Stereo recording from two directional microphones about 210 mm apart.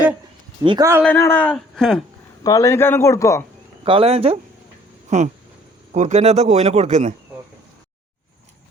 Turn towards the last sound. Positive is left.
turn(degrees=-35)  # may be behind; listen again after turning